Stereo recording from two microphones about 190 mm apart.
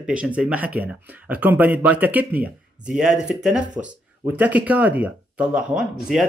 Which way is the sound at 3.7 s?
40° right (ahead or behind).